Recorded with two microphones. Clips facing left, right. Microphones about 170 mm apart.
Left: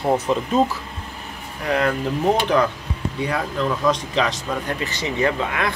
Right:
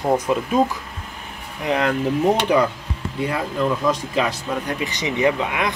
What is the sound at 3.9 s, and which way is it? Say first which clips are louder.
Speech: even; 5° right (ahead or behind).